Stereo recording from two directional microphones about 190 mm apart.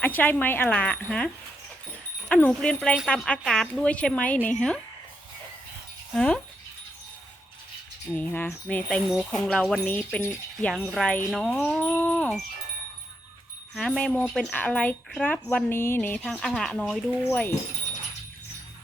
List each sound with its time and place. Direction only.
0.0 s speech: 10° left (ahead or behind)
2.3 s speech: 5° left (ahead or behind)
6.1 s speech: 5° left (ahead or behind)
8.1 s speech: 10° left (ahead or behind)
11.7 s a sound: 10° left (ahead or behind)
13.7 s speech: 5° left (ahead or behind)